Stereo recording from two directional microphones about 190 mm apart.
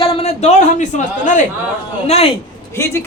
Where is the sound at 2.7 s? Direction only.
15° left (ahead or behind).